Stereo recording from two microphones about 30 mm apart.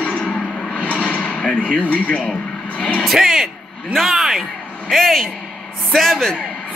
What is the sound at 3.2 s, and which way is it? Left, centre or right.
Speech, centre.